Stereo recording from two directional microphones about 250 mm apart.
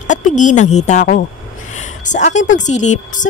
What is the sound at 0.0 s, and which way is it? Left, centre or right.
A woman's voice, left.